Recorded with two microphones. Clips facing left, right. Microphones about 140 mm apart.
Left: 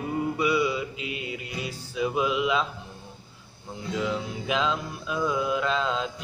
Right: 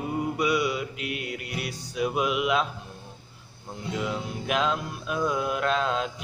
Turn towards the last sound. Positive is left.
turn(degrees=-5)  # may be behind; listen again after turning